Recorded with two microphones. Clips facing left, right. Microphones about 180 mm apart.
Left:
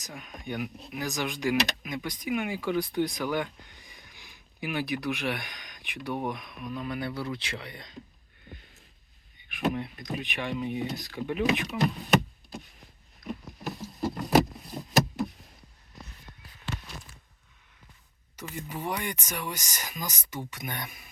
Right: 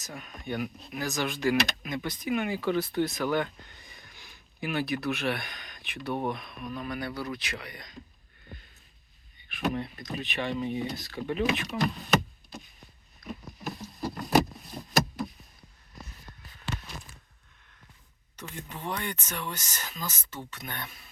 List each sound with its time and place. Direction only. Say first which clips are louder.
0.0 s speech: even; 15° left (ahead or behind)
9.5 s speech: left 1 dB; 15° left (ahead or behind)
13.2 s rowboat: left 3 dB; 20° left (ahead or behind)
13.7 s patter: left 3 dB; 20° left (ahead or behind)
18.3 s speech: left 4 dB; 10° left (ahead or behind)